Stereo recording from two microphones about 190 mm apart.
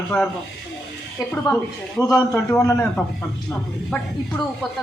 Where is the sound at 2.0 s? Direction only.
15° left (ahead or behind).